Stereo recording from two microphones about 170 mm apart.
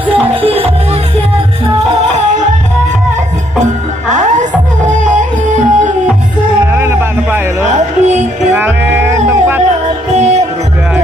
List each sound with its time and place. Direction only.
0.1 s music: 35° right (ahead or behind)
2.1 s music: 45° right (ahead or behind)
4.1 s music: 45° right (ahead or behind)
6.7 s music: 15° right (ahead or behind)
7.6 s music: 45° right (ahead or behind)
8.5 s music: 10° right (ahead or behind)
10.1 s music: 40° right (ahead or behind)